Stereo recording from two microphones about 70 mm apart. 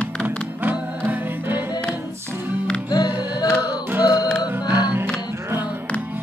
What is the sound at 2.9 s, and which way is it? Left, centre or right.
Music, left.